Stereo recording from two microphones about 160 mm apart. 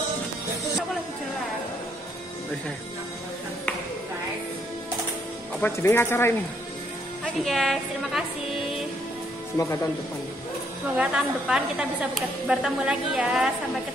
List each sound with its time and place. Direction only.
5.6 s speech: 15° left (ahead or behind)
7.3 s speech: centre (ahead or behind)
9.6 s speech: 20° left (ahead or behind)
11.0 s a woman's voice: 5° right (ahead or behind)